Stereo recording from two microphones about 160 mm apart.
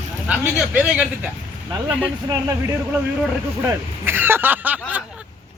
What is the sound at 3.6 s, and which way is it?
Speech, 15° right (ahead or behind).